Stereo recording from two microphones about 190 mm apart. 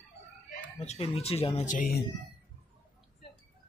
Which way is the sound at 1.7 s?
45° left (ahead or behind).